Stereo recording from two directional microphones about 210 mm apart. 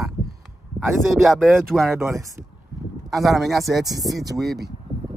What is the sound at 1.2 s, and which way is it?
Speech, centre (ahead or behind).